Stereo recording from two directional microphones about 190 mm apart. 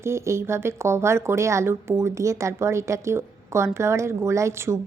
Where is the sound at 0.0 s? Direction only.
15° right (ahead or behind).